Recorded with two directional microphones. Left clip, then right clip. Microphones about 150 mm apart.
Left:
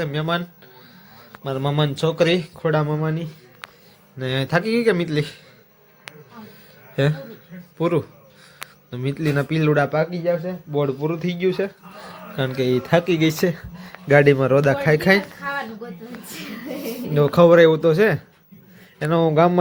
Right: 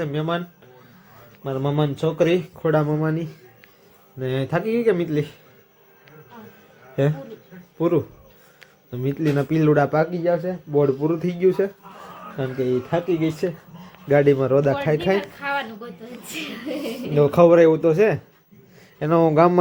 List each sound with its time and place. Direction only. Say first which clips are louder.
0.0 s a man's voice: left 1 dB; 5° left (ahead or behind)
1.5 s speech: left 1 dB; 5° left (ahead or behind)
2.7 s speech: right 3 dB; 10° right (ahead or behind)
4.2 s a man's voice: left 2 dB; 10° left (ahead or behind)
6.9 s a man's voice: even; centre (ahead or behind)
9.5 s speech: right 2 dB; 10° right (ahead or behind)
12.6 s speech: left 4 dB; 45° left (ahead or behind)
14.1 s a man's voice: left 2 dB; 20° left (ahead or behind)
16.3 s speech: right 3 dB; 5° left (ahead or behind)